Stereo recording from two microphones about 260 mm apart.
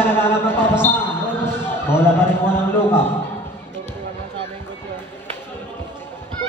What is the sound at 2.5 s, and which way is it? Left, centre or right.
Speech, centre.